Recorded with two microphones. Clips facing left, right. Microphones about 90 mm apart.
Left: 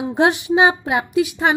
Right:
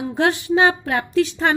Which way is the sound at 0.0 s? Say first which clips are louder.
Left 3 dB; 20° left (ahead or behind).